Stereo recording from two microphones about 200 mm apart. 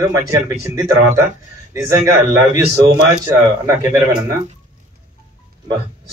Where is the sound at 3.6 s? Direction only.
15° right (ahead or behind).